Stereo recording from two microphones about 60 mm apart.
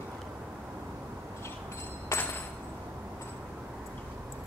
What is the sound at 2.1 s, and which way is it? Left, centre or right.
Hammer, left.